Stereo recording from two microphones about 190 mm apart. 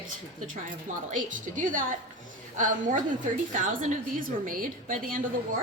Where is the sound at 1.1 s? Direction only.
45° right (ahead or behind).